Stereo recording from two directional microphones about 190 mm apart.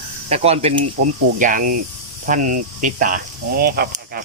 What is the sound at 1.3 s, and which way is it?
Speech, 45° right (ahead or behind).